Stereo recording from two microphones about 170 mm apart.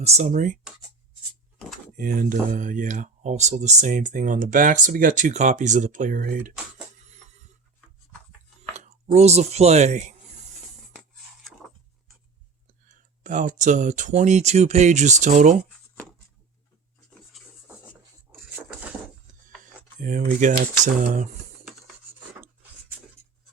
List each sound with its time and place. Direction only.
0.0 s speech: 40° right (ahead or behind)
0.6 s speech: 5° right (ahead or behind)
2.0 s speech: 50° right (ahead or behind)
7.0 s a sound: 45° right (ahead or behind)
9.0 s speech: 40° right (ahead or behind)
11.6 s a sound: centre (ahead or behind)
12.9 s speech: 50° right (ahead or behind)
18.3 s a sound: 10° right (ahead or behind)
20.0 s speech: 50° right (ahead or behind)